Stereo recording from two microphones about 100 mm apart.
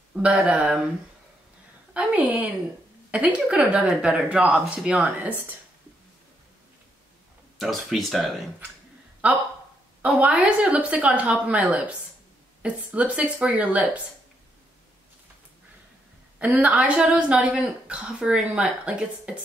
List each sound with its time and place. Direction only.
0.1 s speech: 10° right (ahead or behind)
2.0 s speech: 15° right (ahead or behind)
7.5 s speech: centre (ahead or behind)
9.2 s speech: 15° right (ahead or behind)
16.3 s speech: 15° right (ahead or behind)